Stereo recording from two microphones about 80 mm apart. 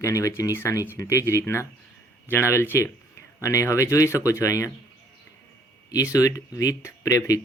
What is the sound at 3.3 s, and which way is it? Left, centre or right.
Speech, left.